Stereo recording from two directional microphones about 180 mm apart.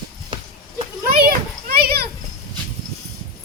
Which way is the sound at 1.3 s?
60° right (ahead or behind).